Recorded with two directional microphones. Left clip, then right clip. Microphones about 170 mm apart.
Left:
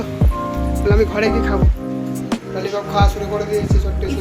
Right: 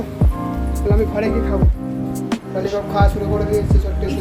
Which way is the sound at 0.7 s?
5° left (ahead or behind).